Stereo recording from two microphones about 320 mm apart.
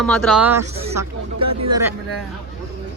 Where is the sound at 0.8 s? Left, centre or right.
Centre.